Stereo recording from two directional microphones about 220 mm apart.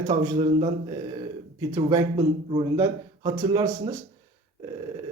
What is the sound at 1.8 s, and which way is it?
Speech, 20° right (ahead or behind).